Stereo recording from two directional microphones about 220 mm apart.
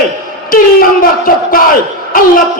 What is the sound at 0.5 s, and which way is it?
Speech, 40° left (ahead or behind).